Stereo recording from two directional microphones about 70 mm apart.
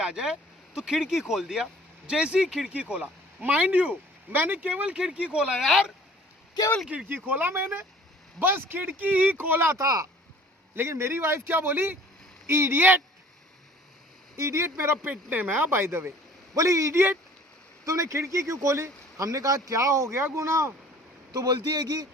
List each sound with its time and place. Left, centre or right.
0.0 s speech: centre
6.9 s speech: right
9.7 s speech: right
10.8 s speech: right
14.3 s speech: right
15.1 s speech: right
16.6 s speech: right
21.3 s a man's voice: right